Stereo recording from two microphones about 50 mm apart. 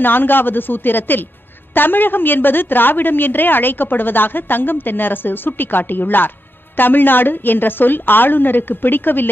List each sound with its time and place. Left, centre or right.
0.0 s a woman's voice: left